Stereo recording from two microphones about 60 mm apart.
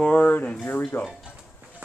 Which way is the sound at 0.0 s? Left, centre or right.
Left.